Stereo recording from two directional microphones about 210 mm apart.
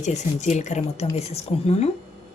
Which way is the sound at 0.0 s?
35° left (ahead or behind).